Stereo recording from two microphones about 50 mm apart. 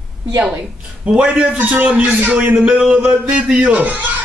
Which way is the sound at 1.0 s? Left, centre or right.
Centre.